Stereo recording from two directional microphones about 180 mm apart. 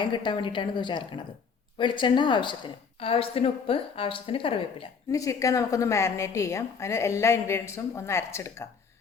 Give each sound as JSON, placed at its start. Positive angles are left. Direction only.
{"t": 0.0, "sound": "a woman's voice", "side_deg": 25}
{"t": 5.1, "sound": "a woman's voice", "side_deg": 20}